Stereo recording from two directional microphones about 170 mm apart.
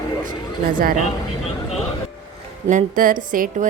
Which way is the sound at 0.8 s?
50° right (ahead or behind).